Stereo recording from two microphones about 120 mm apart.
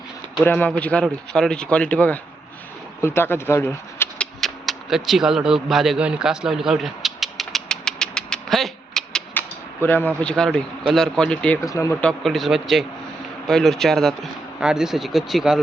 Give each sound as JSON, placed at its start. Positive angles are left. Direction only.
{"t": 0.4, "sound": "speech", "side_deg": 10}
{"t": 4.2, "sound": "a sound", "side_deg": 0}
{"t": 9.8, "sound": "speech", "side_deg": 20}
{"t": 10.2, "sound": "a man's voice", "side_deg": 5}
{"t": 11.6, "sound": "speech", "side_deg": 25}
{"t": 11.9, "sound": "a man's voice", "side_deg": 5}